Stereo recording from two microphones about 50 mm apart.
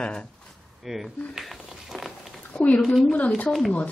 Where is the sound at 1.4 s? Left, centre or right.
Centre.